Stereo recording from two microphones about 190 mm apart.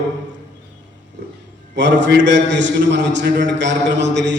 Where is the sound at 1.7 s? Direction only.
70° right (ahead or behind).